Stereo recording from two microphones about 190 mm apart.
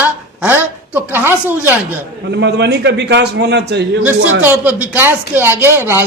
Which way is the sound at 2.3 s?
65° right (ahead or behind).